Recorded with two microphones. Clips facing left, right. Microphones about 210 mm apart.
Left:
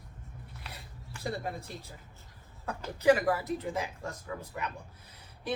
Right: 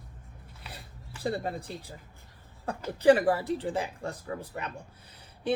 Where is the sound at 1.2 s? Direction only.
30° right (ahead or behind).